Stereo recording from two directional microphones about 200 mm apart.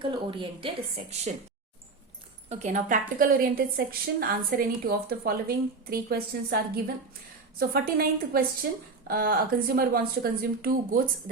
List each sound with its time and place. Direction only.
0.0 s speech: 25° right (ahead or behind)
2.5 s a woman's voice: 35° right (ahead or behind)
7.6 s a woman's voice: 50° right (ahead or behind)